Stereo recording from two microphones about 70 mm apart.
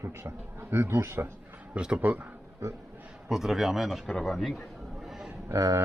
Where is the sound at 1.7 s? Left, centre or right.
Centre.